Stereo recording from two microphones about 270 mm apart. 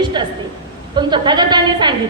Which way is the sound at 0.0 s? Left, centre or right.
Centre.